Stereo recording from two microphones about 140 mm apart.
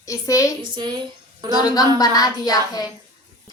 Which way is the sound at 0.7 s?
35° right (ahead or behind).